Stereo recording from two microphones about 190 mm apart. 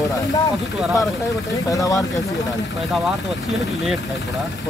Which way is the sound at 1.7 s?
20° left (ahead or behind).